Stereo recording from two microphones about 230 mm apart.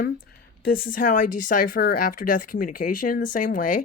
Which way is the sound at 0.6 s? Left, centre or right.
Left.